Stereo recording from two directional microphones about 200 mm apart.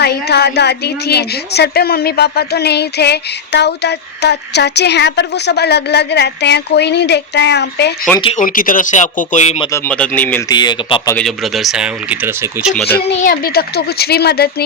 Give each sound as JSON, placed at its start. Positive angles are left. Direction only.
{"t": 0.0, "sound": "a woman's voice", "side_deg": 55}
{"t": 8.2, "sound": "speech", "side_deg": 30}
{"t": 8.4, "sound": "speech", "side_deg": 45}
{"t": 9.7, "sound": "speech", "side_deg": 10}
{"t": 10.5, "sound": "speech", "side_deg": 20}
{"t": 11.1, "sound": "speech", "side_deg": 0}
{"t": 13.2, "sound": "speech", "side_deg": 45}